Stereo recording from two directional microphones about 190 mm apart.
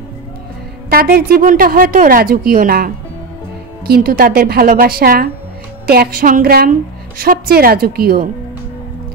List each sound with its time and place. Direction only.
0.8 s a woman's voice: 50° right (ahead or behind)